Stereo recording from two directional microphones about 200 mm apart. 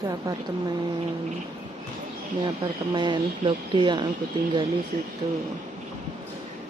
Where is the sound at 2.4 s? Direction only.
25° right (ahead or behind).